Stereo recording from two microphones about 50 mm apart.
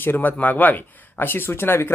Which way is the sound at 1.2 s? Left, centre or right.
Left.